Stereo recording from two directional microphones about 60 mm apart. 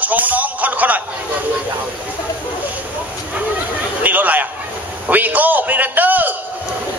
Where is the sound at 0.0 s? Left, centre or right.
Right.